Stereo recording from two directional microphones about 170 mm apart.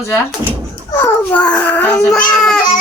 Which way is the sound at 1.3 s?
5° left (ahead or behind).